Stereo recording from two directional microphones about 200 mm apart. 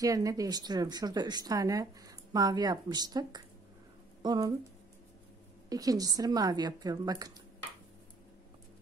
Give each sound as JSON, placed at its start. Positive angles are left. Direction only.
{"t": 0.0, "sound": "speech", "side_deg": -15}
{"t": 5.7, "sound": "speech", "side_deg": -20}